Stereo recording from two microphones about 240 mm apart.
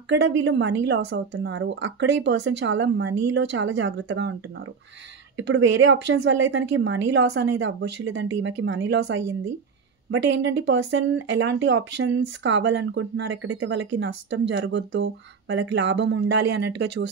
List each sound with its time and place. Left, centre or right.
0.1 s speech: right
5.4 s speech: right